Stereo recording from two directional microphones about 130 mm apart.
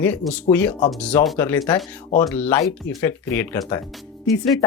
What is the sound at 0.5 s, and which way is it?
Speech, 10° left (ahead or behind).